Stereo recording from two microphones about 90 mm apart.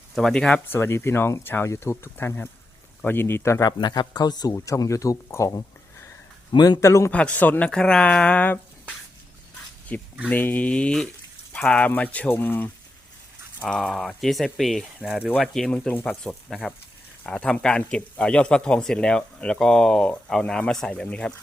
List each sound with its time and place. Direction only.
0.2 s speech: 5° left (ahead or behind)
0.7 s speech: 30° left (ahead or behind)
3.7 s speech: 50° left (ahead or behind); by 6.1 s 35° left (ahead or behind)
6.5 s speech: 50° left (ahead or behind)
6.7 s speech: 30° left (ahead or behind)
7.1 s speech: 15° left (ahead or behind)
7.7 s speech: 10° left (ahead or behind)
9.9 s speech: 15° left (ahead or behind)
13.6 s speech: 10° left (ahead or behind); by 15.3 s 5° right (ahead or behind)
15.4 s speech: 5° left (ahead or behind)